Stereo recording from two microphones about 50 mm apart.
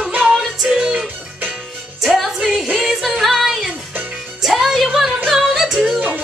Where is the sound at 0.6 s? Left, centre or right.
Centre.